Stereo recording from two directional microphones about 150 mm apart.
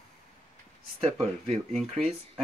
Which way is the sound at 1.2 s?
Centre (ahead or behind).